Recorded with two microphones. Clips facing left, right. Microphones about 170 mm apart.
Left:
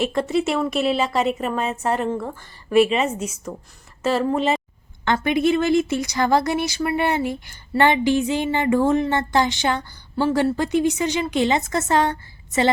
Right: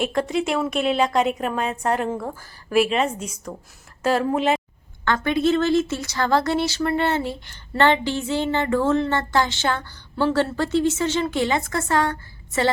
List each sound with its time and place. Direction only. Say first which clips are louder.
0.0 s a woman's voice: left 2 dB; centre (ahead or behind)
5.0 s a woman's voice: left 1 dB; 15° left (ahead or behind)